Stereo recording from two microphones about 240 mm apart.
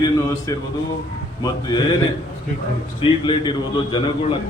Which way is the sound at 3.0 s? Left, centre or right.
Left.